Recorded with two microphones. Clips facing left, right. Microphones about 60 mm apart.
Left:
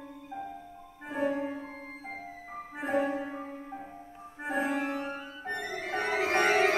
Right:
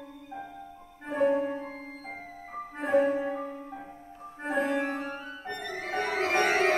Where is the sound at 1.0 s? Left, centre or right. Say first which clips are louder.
Right 5 dB; centre.